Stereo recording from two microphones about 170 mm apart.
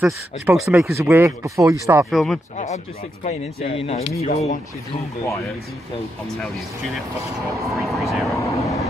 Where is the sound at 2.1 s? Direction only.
Centre (ahead or behind).